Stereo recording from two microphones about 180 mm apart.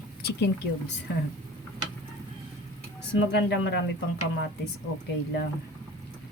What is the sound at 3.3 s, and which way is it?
Speech, 70° left (ahead or behind).